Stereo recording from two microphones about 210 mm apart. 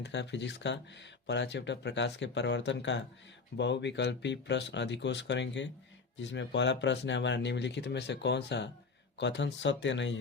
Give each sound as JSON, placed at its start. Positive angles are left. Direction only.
{"t": 0.0, "sound": "speech", "side_deg": 55}